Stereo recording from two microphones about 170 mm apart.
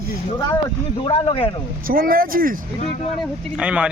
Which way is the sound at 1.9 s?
60° right (ahead or behind).